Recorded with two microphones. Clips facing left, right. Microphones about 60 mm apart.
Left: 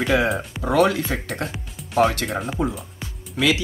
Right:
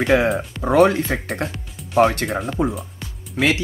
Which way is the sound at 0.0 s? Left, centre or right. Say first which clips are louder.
Right 3 dB; right.